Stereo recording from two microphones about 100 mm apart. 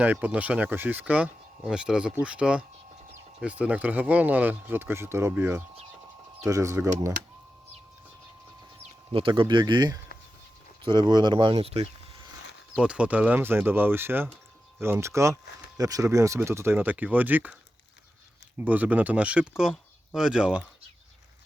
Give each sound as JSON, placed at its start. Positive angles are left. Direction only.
{"t": 0.0, "sound": "speech", "side_deg": -15}
{"t": 9.1, "sound": "speech", "side_deg": -60}
{"t": 12.7, "sound": "speech", "side_deg": -10}
{"t": 18.6, "sound": "speech", "side_deg": -15}